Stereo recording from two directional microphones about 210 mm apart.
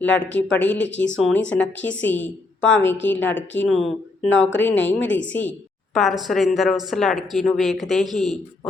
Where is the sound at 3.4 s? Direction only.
60° left (ahead or behind).